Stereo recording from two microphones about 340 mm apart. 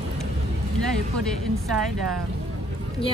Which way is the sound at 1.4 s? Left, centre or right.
Centre.